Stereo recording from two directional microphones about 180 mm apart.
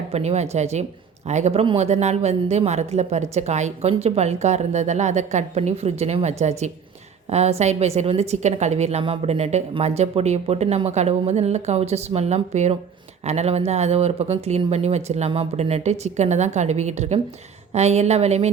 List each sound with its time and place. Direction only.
0.1 s a woman's voice: 35° right (ahead or behind)